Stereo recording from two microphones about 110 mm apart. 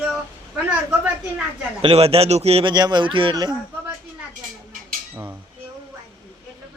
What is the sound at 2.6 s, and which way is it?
Speech, 40° right (ahead or behind).